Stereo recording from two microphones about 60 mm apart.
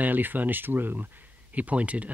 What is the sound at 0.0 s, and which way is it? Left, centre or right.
Speech, right.